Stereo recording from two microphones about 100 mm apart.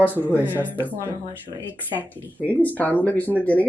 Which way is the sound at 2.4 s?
15° left (ahead or behind).